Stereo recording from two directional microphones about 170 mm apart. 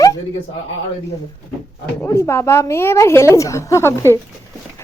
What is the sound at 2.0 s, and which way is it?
A woman's voice, 15° left (ahead or behind).